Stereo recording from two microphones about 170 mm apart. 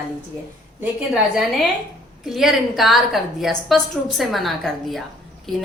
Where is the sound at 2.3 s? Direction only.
Centre (ahead or behind).